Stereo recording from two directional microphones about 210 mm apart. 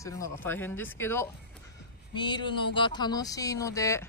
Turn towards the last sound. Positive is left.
turn(degrees=15)  # may be behind; listen again after turning